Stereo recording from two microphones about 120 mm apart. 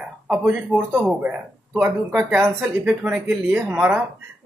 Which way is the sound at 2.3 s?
15° right (ahead or behind).